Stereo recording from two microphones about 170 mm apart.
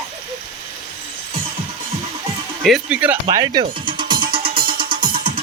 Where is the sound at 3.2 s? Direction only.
25° right (ahead or behind).